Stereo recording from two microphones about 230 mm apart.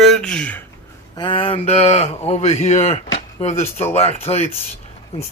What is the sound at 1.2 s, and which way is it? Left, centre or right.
Speech, left.